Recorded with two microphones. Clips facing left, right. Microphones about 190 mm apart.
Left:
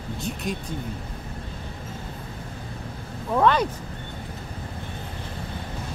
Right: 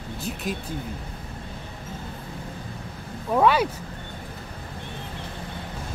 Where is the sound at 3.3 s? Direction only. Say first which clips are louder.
Right 1 dB; 10° right (ahead or behind).